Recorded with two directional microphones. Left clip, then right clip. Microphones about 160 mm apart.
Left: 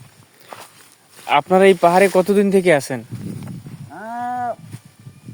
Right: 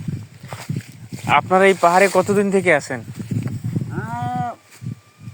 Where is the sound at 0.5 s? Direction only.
85° right.